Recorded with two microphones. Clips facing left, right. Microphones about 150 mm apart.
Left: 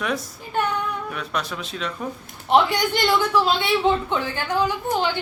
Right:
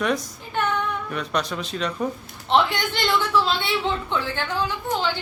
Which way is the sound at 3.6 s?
15° left (ahead or behind).